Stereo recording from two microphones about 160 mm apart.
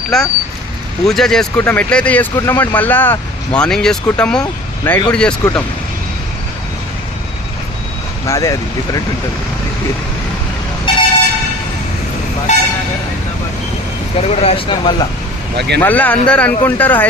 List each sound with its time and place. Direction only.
0.1 s speech: 5° left (ahead or behind)
8.3 s speech: 20° left (ahead or behind)
10.9 s vehicle: 30° left (ahead or behind)
12.5 s speech: 45° left (ahead or behind)
14.2 s speech: 40° left (ahead or behind)
15.5 s speech: 90° right
15.8 s speech: 10° left (ahead or behind)